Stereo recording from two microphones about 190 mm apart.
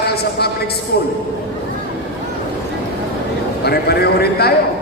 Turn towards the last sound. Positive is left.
turn(degrees=55)  # may be behind; listen again after turning